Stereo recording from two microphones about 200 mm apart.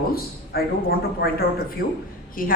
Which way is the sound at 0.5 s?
50° left (ahead or behind).